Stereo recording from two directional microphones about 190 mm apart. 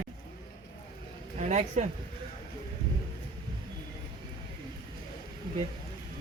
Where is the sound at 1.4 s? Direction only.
40° right (ahead or behind).